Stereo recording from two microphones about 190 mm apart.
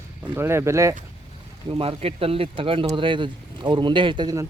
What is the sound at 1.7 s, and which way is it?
Speech, 30° right (ahead or behind).